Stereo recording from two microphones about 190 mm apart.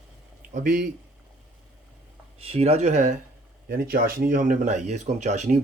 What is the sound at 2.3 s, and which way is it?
Speech, 30° right (ahead or behind).